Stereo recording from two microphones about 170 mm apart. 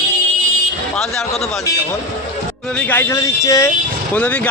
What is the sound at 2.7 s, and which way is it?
Speech, 10° left (ahead or behind).